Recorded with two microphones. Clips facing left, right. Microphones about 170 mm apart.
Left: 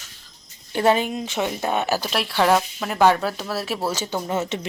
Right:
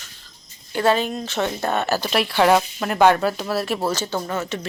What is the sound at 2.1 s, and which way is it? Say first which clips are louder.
Speech: right 3 dB; centre (ahead or behind).